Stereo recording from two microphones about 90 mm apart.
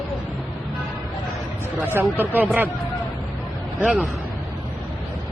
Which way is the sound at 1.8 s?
25° right (ahead or behind).